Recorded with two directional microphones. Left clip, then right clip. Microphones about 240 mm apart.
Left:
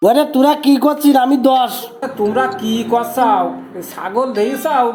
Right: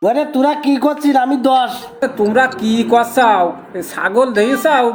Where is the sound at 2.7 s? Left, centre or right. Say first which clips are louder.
Right 3 dB; right.